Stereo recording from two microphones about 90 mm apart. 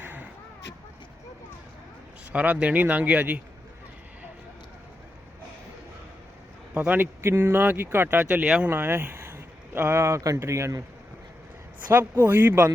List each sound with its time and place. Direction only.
0.0 s a sound: 20° right (ahead or behind)
2.3 s speech: 15° right (ahead or behind)
6.7 s speech: 20° right (ahead or behind)
8.7 s speech: 25° right (ahead or behind)
11.9 s speech: 25° right (ahead or behind)